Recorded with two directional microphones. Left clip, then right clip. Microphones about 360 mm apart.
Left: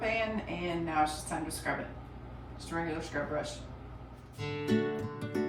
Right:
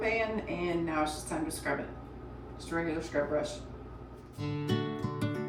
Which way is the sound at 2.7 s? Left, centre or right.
Centre.